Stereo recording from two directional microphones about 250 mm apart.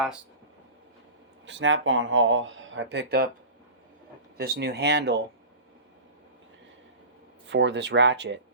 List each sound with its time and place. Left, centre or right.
1.5 s speech: right
4.4 s speech: right
7.4 s speech: right